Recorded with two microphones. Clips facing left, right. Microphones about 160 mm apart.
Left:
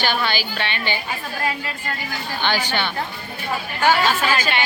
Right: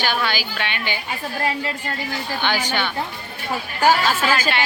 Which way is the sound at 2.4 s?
10° right (ahead or behind).